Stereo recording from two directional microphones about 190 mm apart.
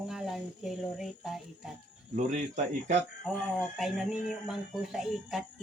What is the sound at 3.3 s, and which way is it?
Cricket, centre (ahead or behind).